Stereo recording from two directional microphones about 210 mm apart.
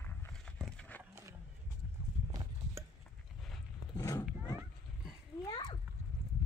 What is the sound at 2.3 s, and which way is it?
Clip-clop, 15° right (ahead or behind).